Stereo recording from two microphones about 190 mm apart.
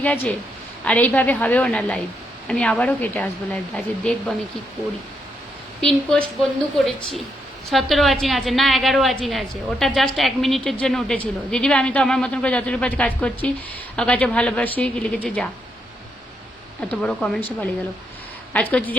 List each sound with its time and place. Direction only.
0.0 s speech: 5° left (ahead or behind)
5.8 s a woman's voice: 5° left (ahead or behind)
16.9 s speech: 5° left (ahead or behind)